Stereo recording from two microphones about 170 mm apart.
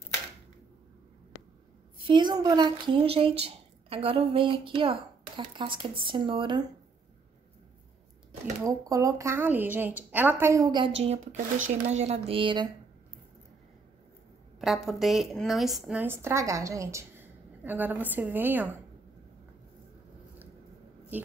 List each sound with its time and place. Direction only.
2.0 s a woman's voice: 30° right (ahead or behind)
8.6 s a woman's voice: 20° right (ahead or behind)
11.0 s speech: 40° right (ahead or behind)
14.6 s a woman's voice: centre (ahead or behind)
21.1 s a woman's voice: 10° right (ahead or behind)